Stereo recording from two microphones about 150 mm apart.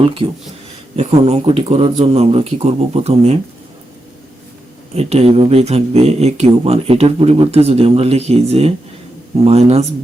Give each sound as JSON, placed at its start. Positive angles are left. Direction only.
{"t": 0.2, "sound": "speech", "side_deg": -35}
{"t": 0.9, "sound": "speech", "side_deg": -45}
{"t": 4.9, "sound": "speech", "side_deg": -45}